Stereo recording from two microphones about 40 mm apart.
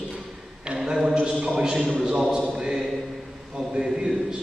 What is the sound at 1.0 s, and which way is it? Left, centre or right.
Speech, right.